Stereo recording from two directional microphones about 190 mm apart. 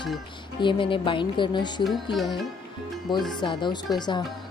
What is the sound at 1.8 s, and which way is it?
Speech, centre (ahead or behind).